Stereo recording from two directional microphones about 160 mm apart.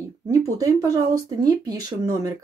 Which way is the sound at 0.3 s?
20° right (ahead or behind).